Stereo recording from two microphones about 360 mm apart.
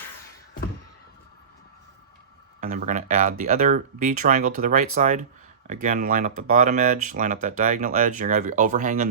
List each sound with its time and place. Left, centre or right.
2.6 s speech: centre